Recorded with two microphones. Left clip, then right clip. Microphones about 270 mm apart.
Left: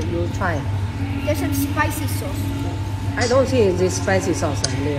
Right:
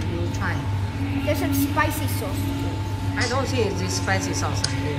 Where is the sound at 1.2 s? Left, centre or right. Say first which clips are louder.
Left 2 dB; right.